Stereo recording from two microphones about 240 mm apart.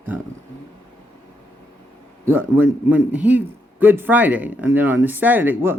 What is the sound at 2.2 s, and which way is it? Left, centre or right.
A man's voice, centre.